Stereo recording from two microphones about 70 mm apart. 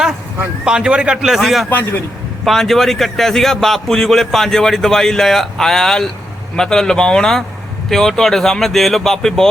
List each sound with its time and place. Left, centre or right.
0.6 s a man's voice: centre
1.7 s a man's voice: left
2.4 s a man's voice: centre